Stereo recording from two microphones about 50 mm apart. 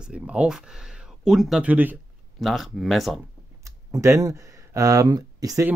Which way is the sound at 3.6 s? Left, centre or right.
Right.